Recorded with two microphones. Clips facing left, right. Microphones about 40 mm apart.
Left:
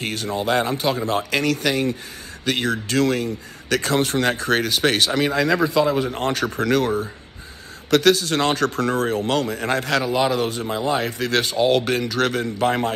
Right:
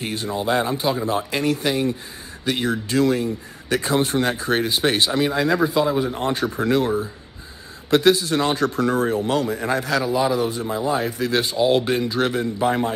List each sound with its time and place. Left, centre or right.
0.0 s a man's voice: left
6.0 s speech: left
7.9 s speech: left